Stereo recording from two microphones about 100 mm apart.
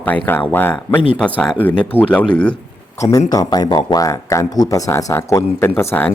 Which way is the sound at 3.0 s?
35° left (ahead or behind).